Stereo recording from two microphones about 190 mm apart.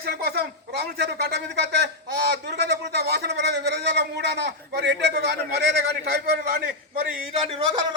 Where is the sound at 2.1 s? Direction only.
60° right (ahead or behind).